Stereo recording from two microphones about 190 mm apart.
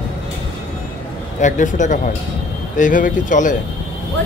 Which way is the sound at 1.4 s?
40° left (ahead or behind).